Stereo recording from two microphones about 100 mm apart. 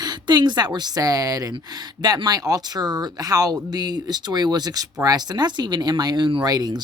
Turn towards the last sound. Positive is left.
turn(degrees=-40)  # may be behind; listen again after turning